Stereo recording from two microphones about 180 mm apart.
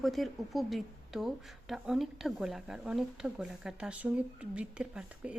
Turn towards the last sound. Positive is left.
turn(degrees=-5)  # may be behind; listen again after turning